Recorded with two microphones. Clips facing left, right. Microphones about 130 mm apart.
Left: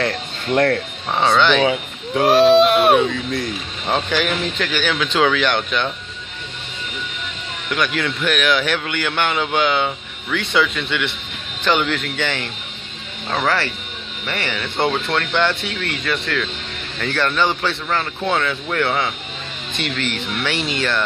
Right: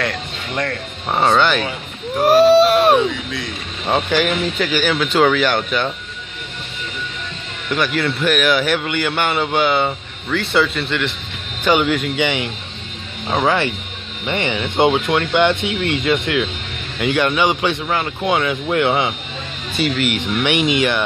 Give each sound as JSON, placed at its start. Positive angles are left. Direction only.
{"t": 1.1, "sound": "a man's voice", "side_deg": -10}
{"t": 1.6, "sound": "speech", "side_deg": 90}
{"t": 2.2, "sound": "a man's voice", "side_deg": -5}
{"t": 7.7, "sound": "a man's voice", "side_deg": -5}
{"t": 19.7, "sound": "a man's voice", "side_deg": -5}